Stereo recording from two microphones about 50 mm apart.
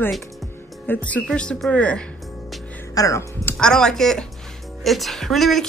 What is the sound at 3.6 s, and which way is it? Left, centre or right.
A woman's voice, centre.